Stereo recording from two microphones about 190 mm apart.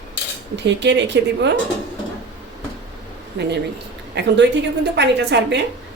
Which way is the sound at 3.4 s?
65° right (ahead or behind).